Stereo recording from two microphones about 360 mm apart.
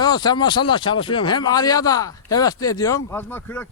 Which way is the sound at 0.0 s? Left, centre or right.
Centre.